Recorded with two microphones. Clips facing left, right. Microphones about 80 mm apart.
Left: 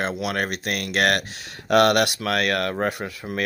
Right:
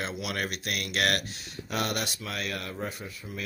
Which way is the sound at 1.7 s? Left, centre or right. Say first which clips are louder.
Left 14 dB; left.